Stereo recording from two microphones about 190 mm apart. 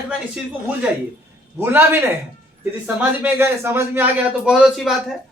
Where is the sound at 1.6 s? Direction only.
10° right (ahead or behind).